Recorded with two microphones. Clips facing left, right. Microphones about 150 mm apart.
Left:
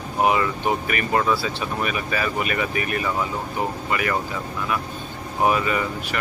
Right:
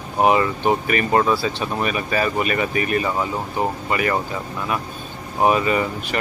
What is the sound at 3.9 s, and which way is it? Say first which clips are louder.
Speech: right 2 dB; 30° right (ahead or behind).